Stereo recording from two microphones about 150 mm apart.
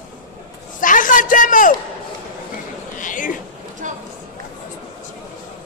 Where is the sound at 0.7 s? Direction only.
60° left (ahead or behind).